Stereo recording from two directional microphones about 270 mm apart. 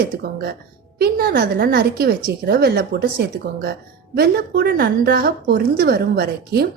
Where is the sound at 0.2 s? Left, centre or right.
Right.